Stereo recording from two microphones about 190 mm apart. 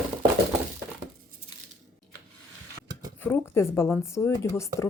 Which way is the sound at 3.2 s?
10° left (ahead or behind).